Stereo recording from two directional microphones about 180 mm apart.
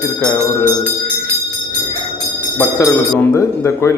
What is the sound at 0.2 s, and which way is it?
Music, 20° left (ahead or behind).